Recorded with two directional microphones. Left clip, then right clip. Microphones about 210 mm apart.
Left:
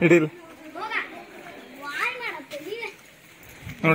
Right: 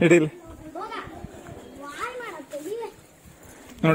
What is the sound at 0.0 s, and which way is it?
Speech, 45° right (ahead or behind).